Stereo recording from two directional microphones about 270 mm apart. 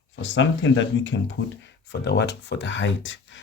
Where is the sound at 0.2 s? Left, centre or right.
Left.